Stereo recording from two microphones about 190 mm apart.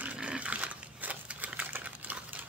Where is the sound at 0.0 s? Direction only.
5° right (ahead or behind).